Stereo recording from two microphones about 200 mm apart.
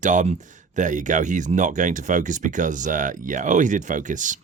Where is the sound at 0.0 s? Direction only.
40° right (ahead or behind).